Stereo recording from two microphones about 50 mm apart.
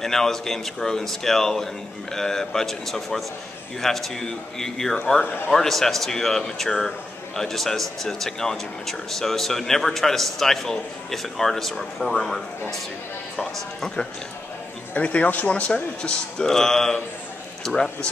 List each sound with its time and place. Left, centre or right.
0.0 s speech: centre
15.0 s speech: left; by 17.0 s centre